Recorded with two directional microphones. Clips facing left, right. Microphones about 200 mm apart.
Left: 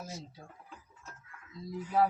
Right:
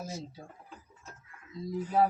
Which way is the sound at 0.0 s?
25° right (ahead or behind).